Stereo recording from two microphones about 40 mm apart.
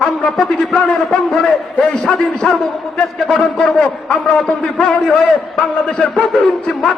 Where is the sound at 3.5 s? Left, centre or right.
Centre.